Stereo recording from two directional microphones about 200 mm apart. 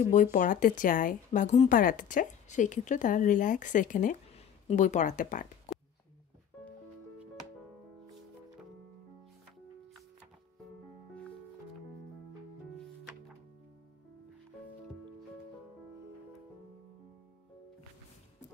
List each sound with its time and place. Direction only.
0.0 s a woman's voice: 40° left (ahead or behind)